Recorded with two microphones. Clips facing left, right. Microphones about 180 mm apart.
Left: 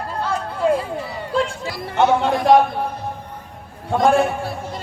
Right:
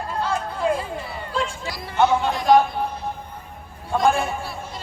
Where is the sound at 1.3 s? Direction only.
55° left (ahead or behind).